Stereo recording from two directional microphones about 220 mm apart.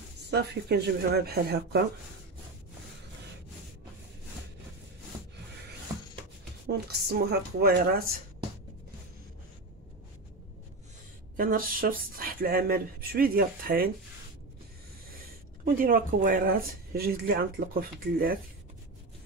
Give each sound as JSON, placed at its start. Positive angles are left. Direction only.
{"t": 0.3, "sound": "speech", "side_deg": -50}
{"t": 6.7, "sound": "speech", "side_deg": -45}
{"t": 11.3, "sound": "speech", "side_deg": -40}
{"t": 15.6, "sound": "speech", "side_deg": -40}